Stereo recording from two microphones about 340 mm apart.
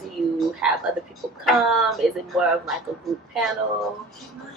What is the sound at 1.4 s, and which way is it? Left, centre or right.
A woman's voice, centre.